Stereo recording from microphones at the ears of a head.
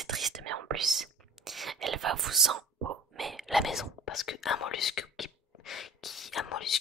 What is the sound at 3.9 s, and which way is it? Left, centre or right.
Whispering, left.